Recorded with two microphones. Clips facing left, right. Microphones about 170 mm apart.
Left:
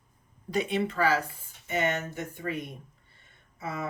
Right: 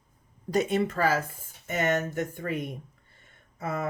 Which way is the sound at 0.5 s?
45° right (ahead or behind).